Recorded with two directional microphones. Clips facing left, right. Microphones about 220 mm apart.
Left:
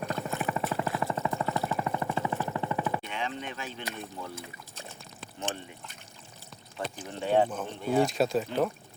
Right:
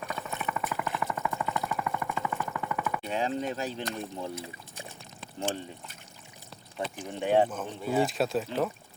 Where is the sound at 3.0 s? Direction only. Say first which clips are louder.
Right 6 dB; 35° right (ahead or behind).